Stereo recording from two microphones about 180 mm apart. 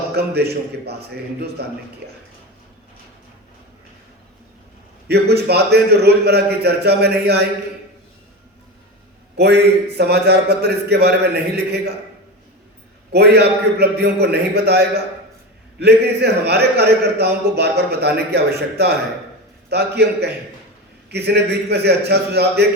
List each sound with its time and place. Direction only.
0.1 s speech: 65° right (ahead or behind)
5.0 s speech: 65° right (ahead or behind)
9.4 s speech: 65° right (ahead or behind)
13.1 s speech: 65° right (ahead or behind)